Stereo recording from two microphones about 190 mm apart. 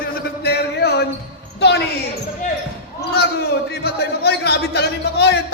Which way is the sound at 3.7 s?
60° left (ahead or behind).